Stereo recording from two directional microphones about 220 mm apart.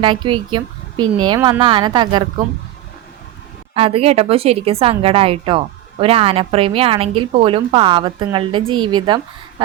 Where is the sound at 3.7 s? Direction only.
25° right (ahead or behind).